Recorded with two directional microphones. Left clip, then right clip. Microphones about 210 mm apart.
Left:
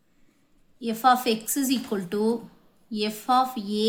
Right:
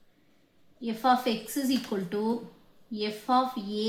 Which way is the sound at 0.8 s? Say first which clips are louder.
Left 4 dB; 45° left (ahead or behind).